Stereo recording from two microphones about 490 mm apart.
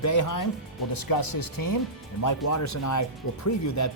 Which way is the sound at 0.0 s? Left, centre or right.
Left.